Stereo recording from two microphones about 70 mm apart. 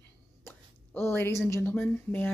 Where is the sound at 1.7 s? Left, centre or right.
Left.